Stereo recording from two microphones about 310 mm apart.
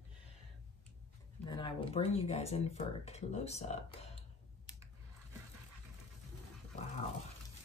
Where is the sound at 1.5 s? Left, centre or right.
Centre.